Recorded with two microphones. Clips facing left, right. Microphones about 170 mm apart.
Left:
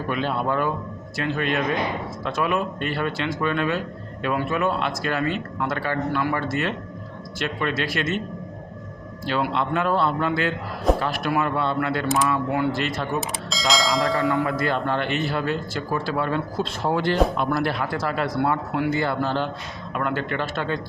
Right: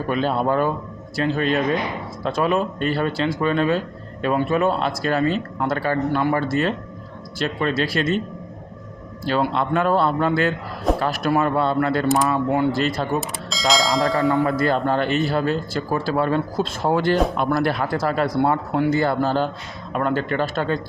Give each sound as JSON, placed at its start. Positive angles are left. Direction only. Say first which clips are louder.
{"t": 0.1, "sound": "speech", "louder": "right 4 dB", "side_deg": -40}
{"t": 9.2, "sound": "speech", "louder": "right 3 dB", "side_deg": -40}
{"t": 13.5, "sound": "speech", "louder": "right 3 dB", "side_deg": 0}
{"t": 14.4, "sound": "speech", "louder": "right 4 dB", "side_deg": -40}